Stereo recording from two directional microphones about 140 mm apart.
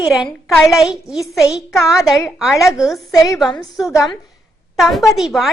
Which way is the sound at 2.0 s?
Centre (ahead or behind).